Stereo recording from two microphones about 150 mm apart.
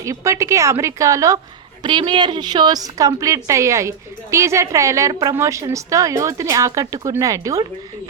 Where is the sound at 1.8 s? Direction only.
35° right (ahead or behind).